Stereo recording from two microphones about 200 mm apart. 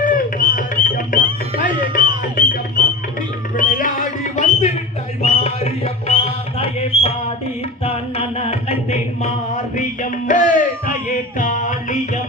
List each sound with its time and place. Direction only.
0.0 s music: 45° left (ahead or behind)